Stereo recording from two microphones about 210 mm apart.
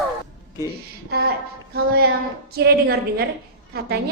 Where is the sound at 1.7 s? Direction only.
45° right (ahead or behind).